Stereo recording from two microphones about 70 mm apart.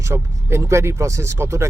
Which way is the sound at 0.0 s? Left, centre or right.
Right.